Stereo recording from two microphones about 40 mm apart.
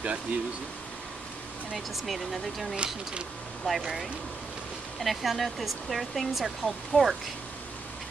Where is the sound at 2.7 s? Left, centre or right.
Right.